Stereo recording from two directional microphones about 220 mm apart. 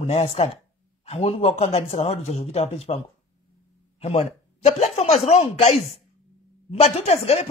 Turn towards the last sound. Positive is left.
turn(degrees=30)  # may be behind; listen again after turning